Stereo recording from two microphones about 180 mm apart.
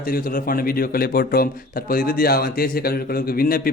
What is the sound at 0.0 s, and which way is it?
A man's voice, 55° left (ahead or behind).